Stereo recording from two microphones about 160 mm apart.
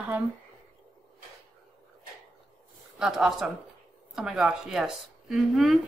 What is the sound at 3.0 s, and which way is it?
A woman's voice, 5° right (ahead or behind).